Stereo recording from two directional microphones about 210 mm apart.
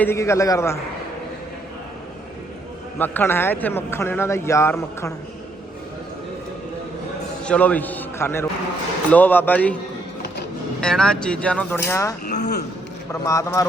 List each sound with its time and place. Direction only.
0.0 s a man's voice: 10° left (ahead or behind)
3.0 s a man's voice: 10° left (ahead or behind)
7.4 s a man's voice: 5° left (ahead or behind)
10.8 s speech: 5° left (ahead or behind)
12.2 s a sound: 35° left (ahead or behind)
13.2 s a man's voice: 15° left (ahead or behind)